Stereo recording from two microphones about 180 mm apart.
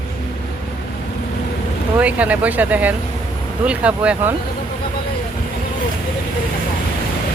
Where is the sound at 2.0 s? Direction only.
5° right (ahead or behind).